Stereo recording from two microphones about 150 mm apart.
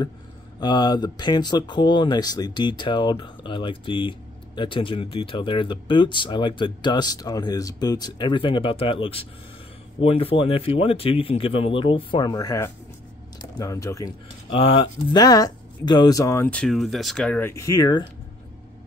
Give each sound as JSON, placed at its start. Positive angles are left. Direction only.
{"t": 0.6, "sound": "speech", "side_deg": 30}
{"t": 14.5, "sound": "speech", "side_deg": 35}
{"t": 16.4, "sound": "speech", "side_deg": 5}
{"t": 17.4, "sound": "speech", "side_deg": 20}